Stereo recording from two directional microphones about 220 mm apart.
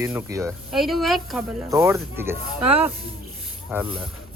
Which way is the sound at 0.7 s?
Centre (ahead or behind).